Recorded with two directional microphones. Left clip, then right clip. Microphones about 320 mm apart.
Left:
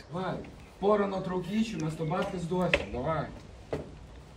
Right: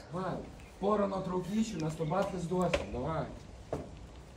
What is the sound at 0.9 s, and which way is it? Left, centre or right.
Speech, centre.